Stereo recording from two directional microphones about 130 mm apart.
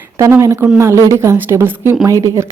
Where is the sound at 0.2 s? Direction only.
20° right (ahead or behind).